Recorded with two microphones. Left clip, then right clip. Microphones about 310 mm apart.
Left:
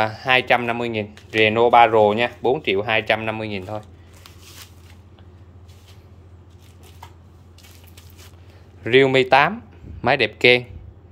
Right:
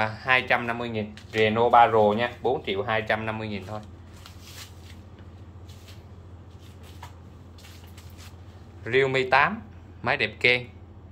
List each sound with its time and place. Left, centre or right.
0.0 s speech: left
8.8 s speech: left